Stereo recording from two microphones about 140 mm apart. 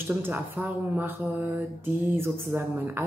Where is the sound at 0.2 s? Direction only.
10° right (ahead or behind).